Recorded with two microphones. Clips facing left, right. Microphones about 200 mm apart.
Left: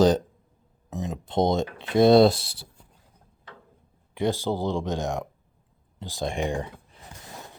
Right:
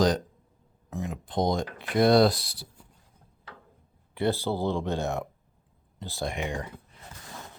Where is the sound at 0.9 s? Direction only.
20° left (ahead or behind).